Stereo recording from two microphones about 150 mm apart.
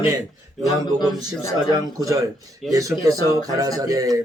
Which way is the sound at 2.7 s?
20° right (ahead or behind).